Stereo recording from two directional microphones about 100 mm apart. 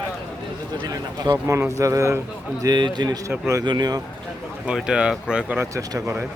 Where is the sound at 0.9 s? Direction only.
40° right (ahead or behind).